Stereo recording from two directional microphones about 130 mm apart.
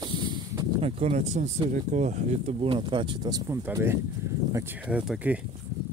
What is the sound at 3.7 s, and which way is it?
Speech, 20° right (ahead or behind).